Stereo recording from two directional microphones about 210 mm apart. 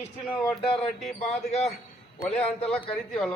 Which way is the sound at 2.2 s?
5° left (ahead or behind).